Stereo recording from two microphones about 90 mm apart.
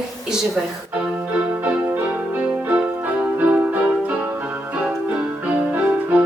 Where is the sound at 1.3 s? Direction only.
15° right (ahead or behind).